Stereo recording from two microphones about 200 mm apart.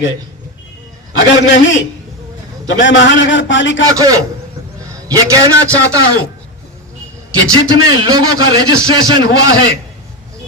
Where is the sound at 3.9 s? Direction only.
15° right (ahead or behind).